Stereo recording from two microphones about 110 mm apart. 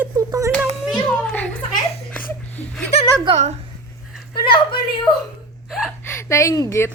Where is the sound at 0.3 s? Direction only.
30° right (ahead or behind).